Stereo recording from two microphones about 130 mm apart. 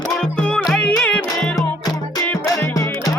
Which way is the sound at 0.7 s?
5° left (ahead or behind).